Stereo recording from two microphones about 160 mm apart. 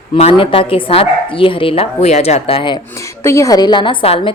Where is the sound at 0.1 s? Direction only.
35° left (ahead or behind).